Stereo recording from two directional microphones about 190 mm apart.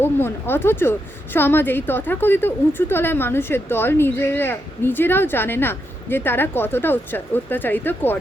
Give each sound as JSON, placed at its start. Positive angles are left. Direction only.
{"t": 0.0, "sound": "a woman's voice", "side_deg": 10}